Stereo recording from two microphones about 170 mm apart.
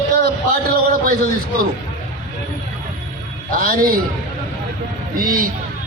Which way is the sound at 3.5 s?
55° right (ahead or behind).